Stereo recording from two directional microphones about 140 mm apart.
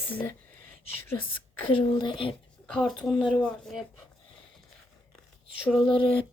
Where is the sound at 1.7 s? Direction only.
35° left (ahead or behind).